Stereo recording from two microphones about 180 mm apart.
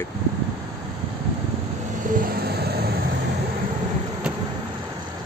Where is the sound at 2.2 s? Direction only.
60° right (ahead or behind).